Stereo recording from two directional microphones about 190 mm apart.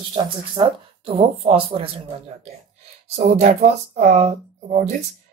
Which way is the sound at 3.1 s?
35° right (ahead or behind).